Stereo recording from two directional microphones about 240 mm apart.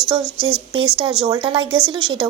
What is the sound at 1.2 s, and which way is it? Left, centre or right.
Speech, right.